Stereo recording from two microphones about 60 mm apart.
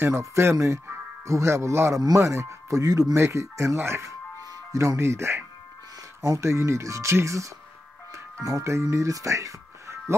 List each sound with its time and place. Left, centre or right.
0.1 s speech: right
2.8 s speech: right
3.2 s speech: right
4.4 s speech: right